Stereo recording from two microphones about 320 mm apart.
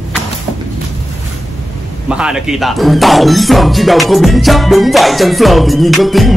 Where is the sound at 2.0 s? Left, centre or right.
Centre.